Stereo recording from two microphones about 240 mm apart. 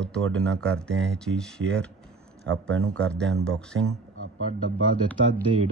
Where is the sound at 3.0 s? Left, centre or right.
Centre.